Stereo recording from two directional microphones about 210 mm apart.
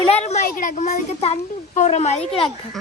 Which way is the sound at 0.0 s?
30° left (ahead or behind).